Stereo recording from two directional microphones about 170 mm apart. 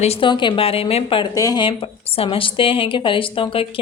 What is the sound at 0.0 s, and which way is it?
A woman's voice, 35° left (ahead or behind).